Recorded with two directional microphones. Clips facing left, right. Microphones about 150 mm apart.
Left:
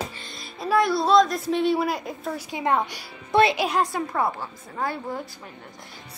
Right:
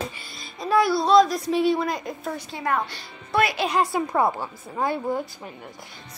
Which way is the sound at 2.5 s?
20° left (ahead or behind).